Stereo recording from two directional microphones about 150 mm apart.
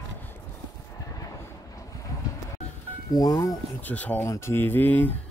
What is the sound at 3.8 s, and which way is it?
Speech, 10° left (ahead or behind).